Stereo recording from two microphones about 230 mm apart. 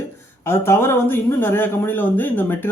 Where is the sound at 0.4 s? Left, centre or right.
Centre.